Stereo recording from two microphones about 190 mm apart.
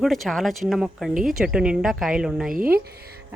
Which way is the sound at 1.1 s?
45° right (ahead or behind).